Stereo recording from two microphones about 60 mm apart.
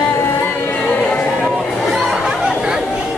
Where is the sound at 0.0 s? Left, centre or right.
Left.